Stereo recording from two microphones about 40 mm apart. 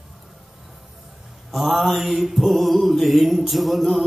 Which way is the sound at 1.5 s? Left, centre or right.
Centre.